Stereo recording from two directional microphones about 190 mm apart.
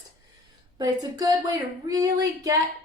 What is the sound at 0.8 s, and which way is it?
A woman's voice, 20° right (ahead or behind).